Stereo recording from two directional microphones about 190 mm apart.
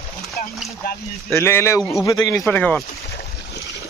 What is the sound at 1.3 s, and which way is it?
A man's voice, 15° left (ahead or behind).